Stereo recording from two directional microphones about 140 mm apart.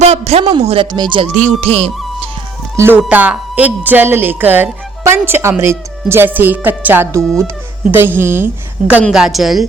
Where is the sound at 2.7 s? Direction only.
15° right (ahead or behind).